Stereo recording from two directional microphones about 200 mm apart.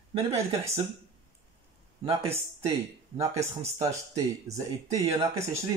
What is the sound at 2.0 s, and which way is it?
Speech, 25° right (ahead or behind).